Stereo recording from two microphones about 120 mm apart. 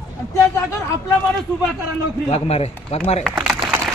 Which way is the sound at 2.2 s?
55° left (ahead or behind).